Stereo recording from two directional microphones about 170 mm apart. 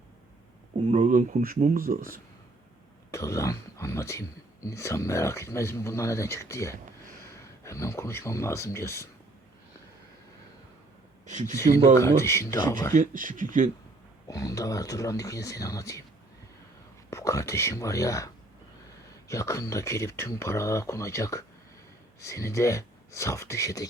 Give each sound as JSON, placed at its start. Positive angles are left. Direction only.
{"t": 0.9, "sound": "speech", "side_deg": -45}
{"t": 3.1, "sound": "speech", "side_deg": 15}
{"t": 11.3, "sound": "speech", "side_deg": -45}
{"t": 11.9, "sound": "speech", "side_deg": 15}
{"t": 12.9, "sound": "speech", "side_deg": -50}
{"t": 14.3, "sound": "speech", "side_deg": 20}
{"t": 17.1, "sound": "speech", "side_deg": 15}
{"t": 19.3, "sound": "speech", "side_deg": 15}